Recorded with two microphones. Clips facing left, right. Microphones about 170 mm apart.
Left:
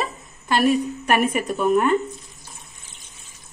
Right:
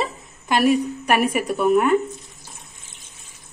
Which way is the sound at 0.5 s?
10° right (ahead or behind).